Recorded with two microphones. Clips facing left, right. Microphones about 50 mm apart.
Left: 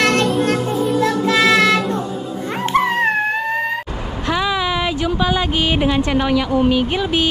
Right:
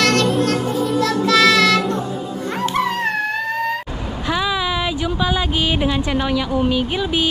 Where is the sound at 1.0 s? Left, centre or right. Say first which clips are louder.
Right 2 dB; left.